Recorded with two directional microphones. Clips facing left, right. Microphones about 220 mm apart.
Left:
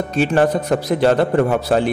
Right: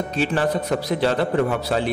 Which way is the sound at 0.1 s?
50° left (ahead or behind).